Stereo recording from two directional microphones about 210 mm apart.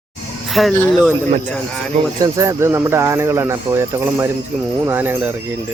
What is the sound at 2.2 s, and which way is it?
Speech, 15° right (ahead or behind).